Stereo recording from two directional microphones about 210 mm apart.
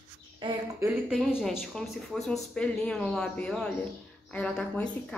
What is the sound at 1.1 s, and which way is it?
A woman's voice, centre (ahead or behind).